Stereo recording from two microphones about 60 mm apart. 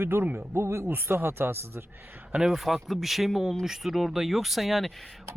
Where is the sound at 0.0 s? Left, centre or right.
Right.